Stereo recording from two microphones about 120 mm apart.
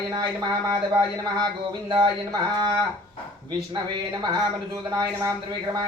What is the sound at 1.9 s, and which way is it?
Speech, 35° right (ahead or behind).